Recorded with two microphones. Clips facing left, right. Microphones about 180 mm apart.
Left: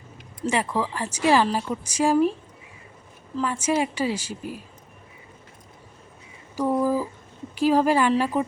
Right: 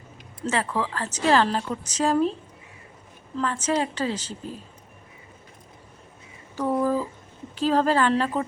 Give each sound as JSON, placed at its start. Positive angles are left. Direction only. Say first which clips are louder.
{"t": 0.4, "sound": "a woman's voice", "louder": "left 1 dB", "side_deg": 15}
{"t": 3.3, "sound": "a woman's voice", "louder": "left 1 dB", "side_deg": 10}
{"t": 6.6, "sound": "a sound", "louder": "left 1 dB", "side_deg": 10}
{"t": 7.5, "sound": "a woman's voice", "louder": "left 2 dB", "side_deg": 10}